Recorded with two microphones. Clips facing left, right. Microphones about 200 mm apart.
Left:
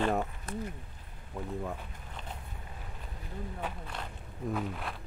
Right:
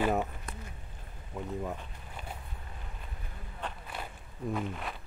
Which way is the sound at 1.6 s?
5° right (ahead or behind).